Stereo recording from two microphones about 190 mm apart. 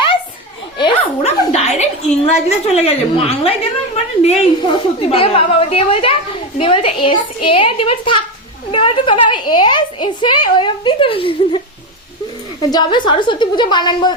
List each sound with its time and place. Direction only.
0.8 s a woman's voice: 30° left (ahead or behind)
12.7 s a woman's voice: 25° left (ahead or behind)